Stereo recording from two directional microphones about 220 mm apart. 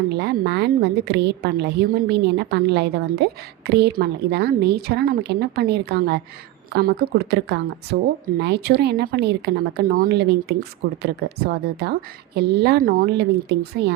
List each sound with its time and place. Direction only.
0.1 s speech: 50° right (ahead or behind)